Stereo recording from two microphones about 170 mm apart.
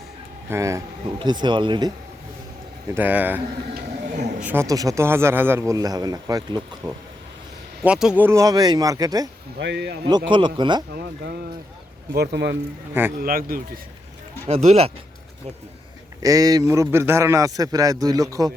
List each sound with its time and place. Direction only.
0.5 s a man's voice: 20° right (ahead or behind)
2.9 s a man's voice: 10° right (ahead or behind)
7.9 s a man's voice: 5° right (ahead or behind); by 9.3 s 20° right (ahead or behind)
9.6 s speech: 85° right
10.1 s a man's voice: 25° right (ahead or behind)
10.9 s speech: 65° right (ahead or behind)
12.1 s speech: 75° right (ahead or behind)
12.9 s a man's voice: 10° right (ahead or behind)
13.2 s speech: 55° right (ahead or behind)
14.5 s speech: 40° right (ahead or behind)
16.2 s a man's voice: 20° right (ahead or behind)